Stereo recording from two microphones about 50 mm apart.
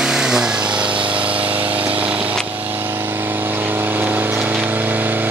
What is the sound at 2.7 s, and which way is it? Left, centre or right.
Vehicle, right.